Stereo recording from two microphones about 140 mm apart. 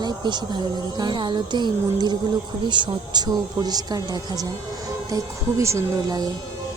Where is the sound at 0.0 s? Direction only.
30° right (ahead or behind).